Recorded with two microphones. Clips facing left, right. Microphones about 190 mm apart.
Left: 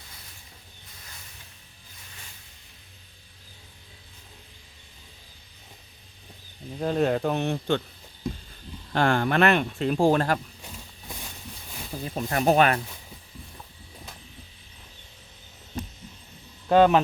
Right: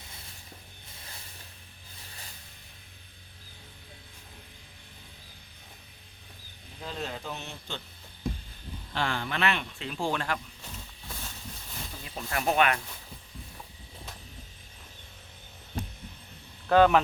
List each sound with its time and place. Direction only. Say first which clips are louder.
6.7 s speech: left 13 dB; 55° left (ahead or behind)
8.9 s speech: left 9 dB; 50° left (ahead or behind)
11.1 s a sound: left 2 dB; 15° left (ahead or behind)
12.0 s speech: left 7 dB; 40° left (ahead or behind)
16.6 s speech: left 3 dB; 20° left (ahead or behind)